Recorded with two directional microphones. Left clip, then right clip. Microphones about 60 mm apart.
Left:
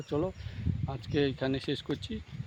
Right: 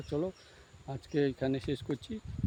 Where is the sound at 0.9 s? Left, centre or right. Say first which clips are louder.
Left 1 dB; centre.